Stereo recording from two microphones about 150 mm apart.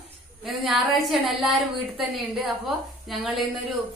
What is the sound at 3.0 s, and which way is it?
Speech, centre (ahead or behind).